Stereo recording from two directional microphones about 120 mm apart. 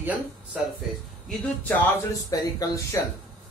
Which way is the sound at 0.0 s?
15° right (ahead or behind).